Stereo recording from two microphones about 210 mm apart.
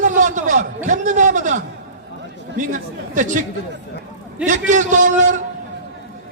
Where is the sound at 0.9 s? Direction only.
35° right (ahead or behind).